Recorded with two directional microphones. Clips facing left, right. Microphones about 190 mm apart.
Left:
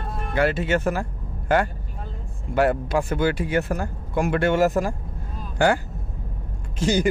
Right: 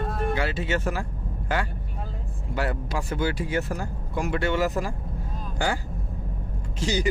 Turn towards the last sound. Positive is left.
turn(degrees=50)  # may be behind; listen again after turning